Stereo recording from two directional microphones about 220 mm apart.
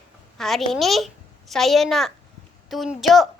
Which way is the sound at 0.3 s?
Centre (ahead or behind).